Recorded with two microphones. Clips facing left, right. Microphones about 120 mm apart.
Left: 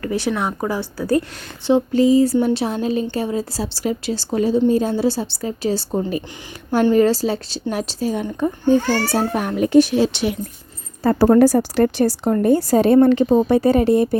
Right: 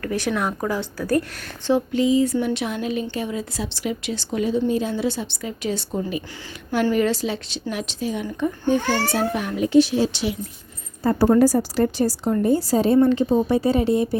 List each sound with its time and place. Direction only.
0.0 s a woman's voice: 5° left (ahead or behind)
1.9 s a child's voice: 40° left (ahead or behind)
10.0 s speech: 60° left (ahead or behind)
11.0 s speech: 80° left; by 14.2 s 55° left (ahead or behind)